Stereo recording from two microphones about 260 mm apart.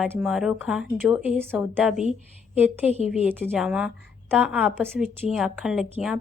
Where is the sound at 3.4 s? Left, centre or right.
Centre.